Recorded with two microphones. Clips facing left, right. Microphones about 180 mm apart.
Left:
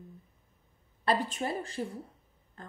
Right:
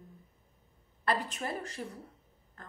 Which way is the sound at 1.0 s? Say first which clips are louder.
Left 3 dB; 30° left (ahead or behind).